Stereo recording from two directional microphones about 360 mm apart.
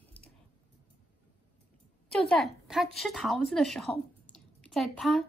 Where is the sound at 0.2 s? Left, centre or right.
Centre.